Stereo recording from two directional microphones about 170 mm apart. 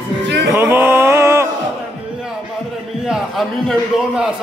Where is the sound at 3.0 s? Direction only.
Centre (ahead or behind).